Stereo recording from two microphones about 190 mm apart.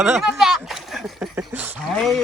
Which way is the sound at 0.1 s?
Centre (ahead or behind).